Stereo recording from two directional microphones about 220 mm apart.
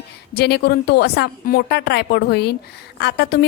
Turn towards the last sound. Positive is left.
turn(degrees=50)  # may be behind; listen again after turning